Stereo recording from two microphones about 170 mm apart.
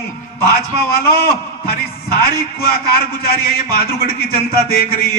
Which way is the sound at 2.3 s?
20° right (ahead or behind).